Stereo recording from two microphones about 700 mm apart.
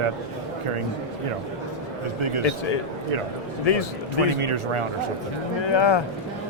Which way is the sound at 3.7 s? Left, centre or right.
Left.